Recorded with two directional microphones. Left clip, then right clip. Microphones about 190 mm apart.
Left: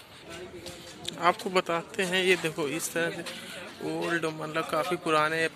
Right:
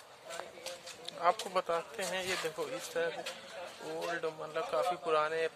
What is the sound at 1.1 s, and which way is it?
A man's voice, centre (ahead or behind).